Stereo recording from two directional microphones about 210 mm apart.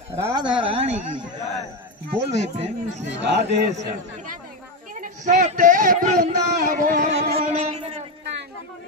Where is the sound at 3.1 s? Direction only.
55° right (ahead or behind).